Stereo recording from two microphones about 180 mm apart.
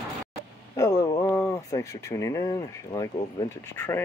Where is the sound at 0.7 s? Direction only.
20° left (ahead or behind).